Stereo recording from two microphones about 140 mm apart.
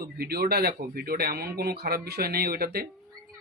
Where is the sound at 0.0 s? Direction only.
90° right.